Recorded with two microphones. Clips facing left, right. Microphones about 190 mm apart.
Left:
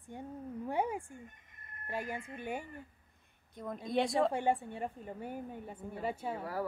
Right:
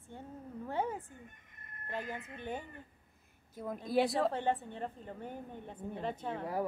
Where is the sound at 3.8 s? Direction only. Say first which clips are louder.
Even; 5° right (ahead or behind).